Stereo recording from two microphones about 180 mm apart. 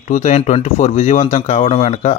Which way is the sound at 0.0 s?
40° left (ahead or behind).